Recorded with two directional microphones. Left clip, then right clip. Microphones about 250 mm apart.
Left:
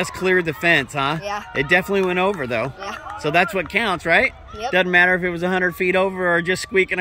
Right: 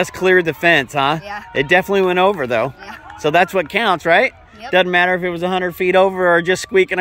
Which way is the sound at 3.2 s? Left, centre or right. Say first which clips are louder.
Right 4 dB; centre.